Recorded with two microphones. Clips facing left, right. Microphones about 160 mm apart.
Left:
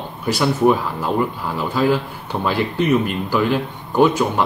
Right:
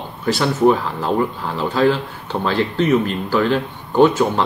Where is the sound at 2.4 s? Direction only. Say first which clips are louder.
Right 1 dB; 10° left (ahead or behind).